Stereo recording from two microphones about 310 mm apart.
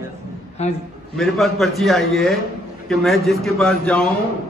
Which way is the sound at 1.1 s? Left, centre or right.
Centre.